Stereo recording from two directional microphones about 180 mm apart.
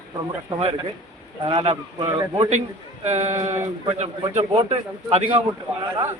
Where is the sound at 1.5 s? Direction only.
25° right (ahead or behind).